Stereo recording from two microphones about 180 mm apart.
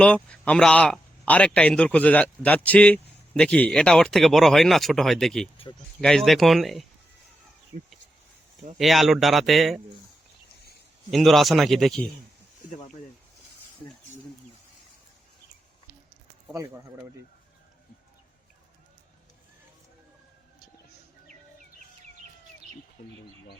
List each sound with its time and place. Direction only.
0.0 s speech: 5° left (ahead or behind)
8.8 s speech: centre (ahead or behind)
11.1 s speech: centre (ahead or behind)
23.0 s bird: 50° left (ahead or behind)